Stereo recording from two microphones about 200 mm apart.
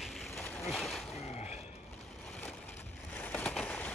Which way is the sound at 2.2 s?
5° left (ahead or behind).